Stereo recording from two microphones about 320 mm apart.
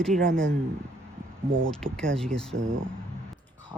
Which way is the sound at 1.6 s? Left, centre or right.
Centre.